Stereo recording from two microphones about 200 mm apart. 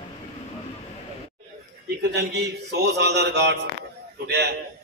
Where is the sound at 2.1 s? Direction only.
55° right (ahead or behind).